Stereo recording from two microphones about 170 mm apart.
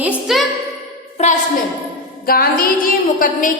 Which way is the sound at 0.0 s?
5° right (ahead or behind).